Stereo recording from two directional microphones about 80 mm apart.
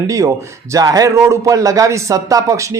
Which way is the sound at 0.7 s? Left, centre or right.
Right.